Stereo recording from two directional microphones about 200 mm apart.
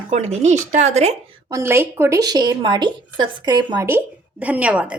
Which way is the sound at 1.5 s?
10° right (ahead or behind).